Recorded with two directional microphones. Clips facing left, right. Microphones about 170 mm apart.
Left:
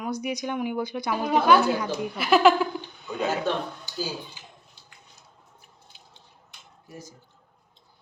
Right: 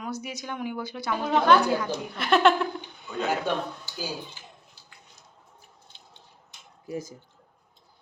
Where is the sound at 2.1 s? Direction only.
5° left (ahead or behind).